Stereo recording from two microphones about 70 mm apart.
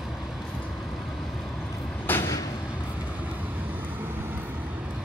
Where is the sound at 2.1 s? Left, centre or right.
Left.